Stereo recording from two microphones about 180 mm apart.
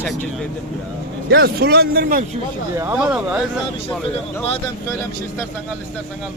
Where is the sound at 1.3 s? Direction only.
65° right (ahead or behind).